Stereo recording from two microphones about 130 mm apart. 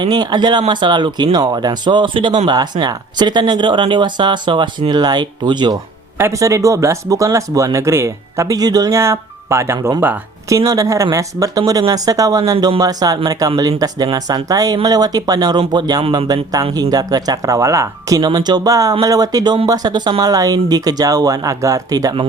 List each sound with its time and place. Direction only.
0.0 s speech: 30° right (ahead or behind)
6.1 s speech: 20° right (ahead or behind)
10.6 s speech: 25° right (ahead or behind)